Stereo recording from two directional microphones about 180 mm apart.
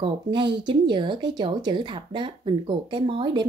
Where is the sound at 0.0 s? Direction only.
25° right (ahead or behind).